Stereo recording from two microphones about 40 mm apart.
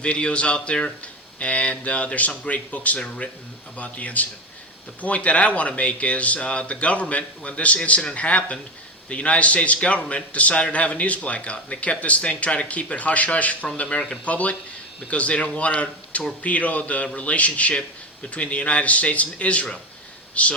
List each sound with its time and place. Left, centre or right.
0.0 s a man's voice: left